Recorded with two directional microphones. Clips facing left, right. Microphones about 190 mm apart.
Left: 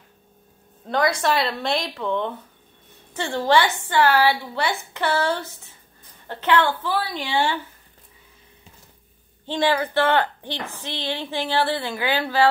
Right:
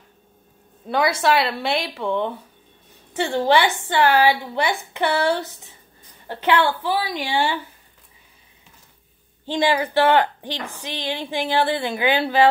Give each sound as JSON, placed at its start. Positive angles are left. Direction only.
{"t": 0.8, "sound": "speech", "side_deg": -5}
{"t": 9.5, "sound": "speech", "side_deg": -15}